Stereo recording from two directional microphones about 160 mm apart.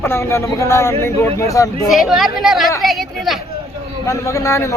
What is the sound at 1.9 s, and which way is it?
Speech, centre (ahead or behind).